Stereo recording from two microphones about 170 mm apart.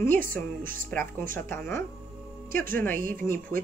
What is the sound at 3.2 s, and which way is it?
Speech, 20° left (ahead or behind).